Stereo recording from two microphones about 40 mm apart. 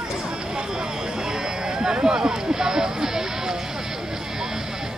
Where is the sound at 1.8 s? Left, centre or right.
Centre.